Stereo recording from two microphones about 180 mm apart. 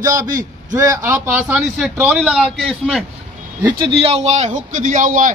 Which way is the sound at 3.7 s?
30° right (ahead or behind).